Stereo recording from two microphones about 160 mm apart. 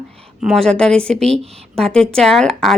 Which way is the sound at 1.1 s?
40° right (ahead or behind).